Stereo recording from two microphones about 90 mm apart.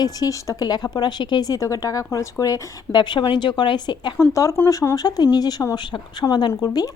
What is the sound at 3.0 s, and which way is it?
Speech, 60° left (ahead or behind).